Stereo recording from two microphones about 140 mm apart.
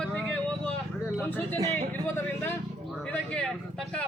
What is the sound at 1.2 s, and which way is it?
A man's voice, 15° left (ahead or behind).